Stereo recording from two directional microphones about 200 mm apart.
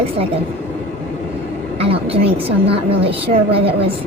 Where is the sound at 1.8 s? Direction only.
30° right (ahead or behind).